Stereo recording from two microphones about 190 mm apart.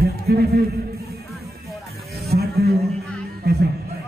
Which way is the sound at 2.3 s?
55° right (ahead or behind).